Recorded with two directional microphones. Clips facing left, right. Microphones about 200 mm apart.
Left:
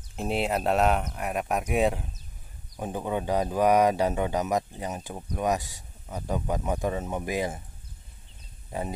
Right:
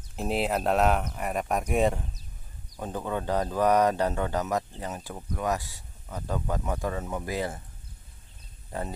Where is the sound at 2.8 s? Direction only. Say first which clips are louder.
Left 2 dB; 15° left (ahead or behind).